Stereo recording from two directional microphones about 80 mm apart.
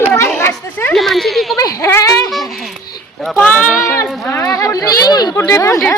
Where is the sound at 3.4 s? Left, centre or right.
Centre.